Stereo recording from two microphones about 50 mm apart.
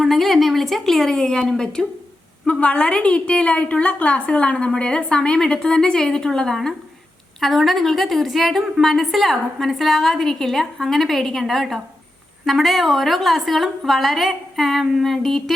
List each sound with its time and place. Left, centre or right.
0.0 s speech: centre
2.5 s a woman's voice: left; by 15.5 s centre